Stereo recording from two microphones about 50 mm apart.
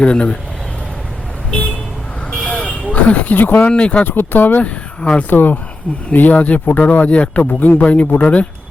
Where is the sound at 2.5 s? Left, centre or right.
Left.